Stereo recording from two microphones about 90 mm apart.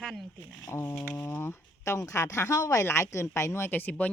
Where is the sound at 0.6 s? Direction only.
25° left (ahead or behind).